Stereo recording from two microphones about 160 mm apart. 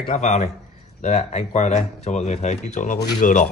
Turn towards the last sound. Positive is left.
turn(degrees=55)  # may be behind; listen again after turning